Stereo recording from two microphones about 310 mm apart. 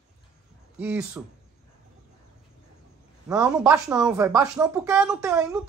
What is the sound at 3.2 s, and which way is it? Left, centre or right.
Speech, centre.